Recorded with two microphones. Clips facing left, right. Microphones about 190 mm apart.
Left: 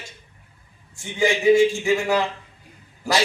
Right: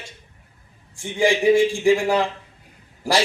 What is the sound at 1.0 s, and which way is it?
Speech, 30° right (ahead or behind).